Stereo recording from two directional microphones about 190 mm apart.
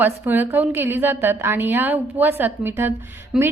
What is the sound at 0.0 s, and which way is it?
A woman's voice, 10° right (ahead or behind).